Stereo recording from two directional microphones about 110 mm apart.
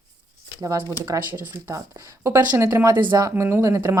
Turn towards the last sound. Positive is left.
turn(degrees=-25)  # may be behind; listen again after turning